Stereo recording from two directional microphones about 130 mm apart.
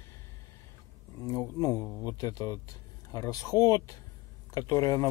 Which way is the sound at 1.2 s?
25° left (ahead or behind).